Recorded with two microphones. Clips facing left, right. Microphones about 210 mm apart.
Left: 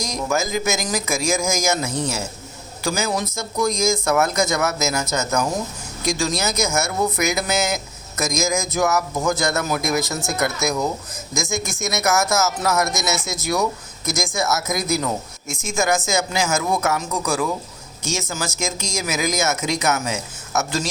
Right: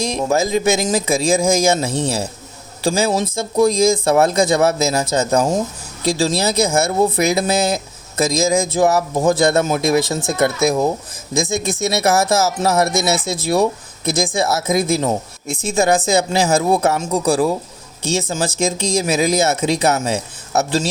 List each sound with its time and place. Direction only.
0.0 s speech: 30° right (ahead or behind)